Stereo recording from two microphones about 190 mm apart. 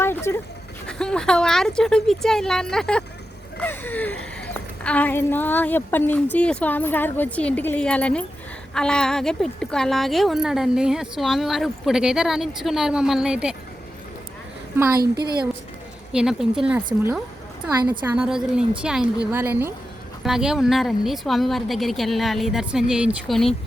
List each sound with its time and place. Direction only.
0.0 s a sound: 15° left (ahead or behind)
0.9 s a woman's voice: 5° left (ahead or behind)
14.9 s a woman's voice: 55° right (ahead or behind)
16.1 s speech: 5° right (ahead or behind)